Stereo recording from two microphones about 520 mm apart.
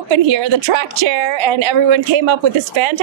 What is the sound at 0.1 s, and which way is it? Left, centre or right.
A woman's voice, right.